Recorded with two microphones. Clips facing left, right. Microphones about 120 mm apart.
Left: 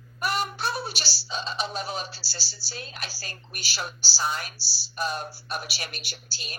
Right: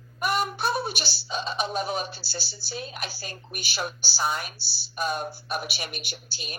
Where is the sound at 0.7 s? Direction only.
55° right (ahead or behind).